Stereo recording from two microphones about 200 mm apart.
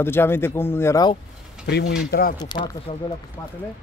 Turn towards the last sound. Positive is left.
turn(degrees=20)  # may be behind; listen again after turning